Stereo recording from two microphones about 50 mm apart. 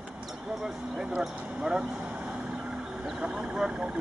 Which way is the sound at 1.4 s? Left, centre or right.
Right.